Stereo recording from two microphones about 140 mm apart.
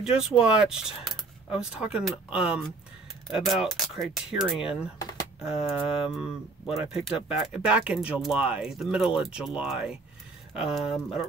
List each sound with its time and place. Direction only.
0.0 s speech: 5° right (ahead or behind)
5.4 s a sound: 45° left (ahead or behind)
6.1 s speech: centre (ahead or behind)